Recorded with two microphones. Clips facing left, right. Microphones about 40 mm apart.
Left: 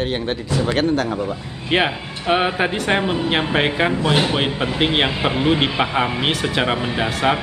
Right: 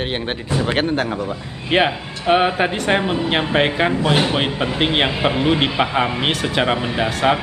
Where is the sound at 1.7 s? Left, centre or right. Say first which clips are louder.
Right 2 dB; centre.